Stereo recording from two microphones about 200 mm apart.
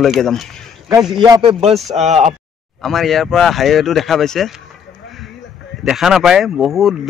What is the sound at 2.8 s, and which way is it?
A man's voice, centre (ahead or behind).